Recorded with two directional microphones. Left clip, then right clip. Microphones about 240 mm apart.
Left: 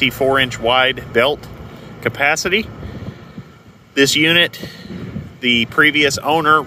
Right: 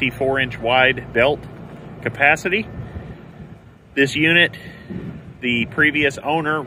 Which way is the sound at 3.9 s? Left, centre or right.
Centre.